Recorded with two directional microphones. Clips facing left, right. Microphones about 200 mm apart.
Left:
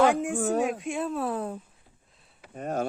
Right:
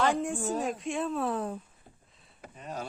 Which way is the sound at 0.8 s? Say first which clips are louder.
Left 1 dB; 5° left (ahead or behind).